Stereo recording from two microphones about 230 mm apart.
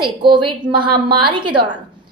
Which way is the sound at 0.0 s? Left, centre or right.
Right.